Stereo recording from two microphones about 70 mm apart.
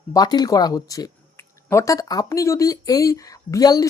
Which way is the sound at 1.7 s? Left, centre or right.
Left.